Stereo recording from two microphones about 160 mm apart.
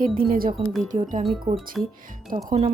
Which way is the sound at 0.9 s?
55° right (ahead or behind).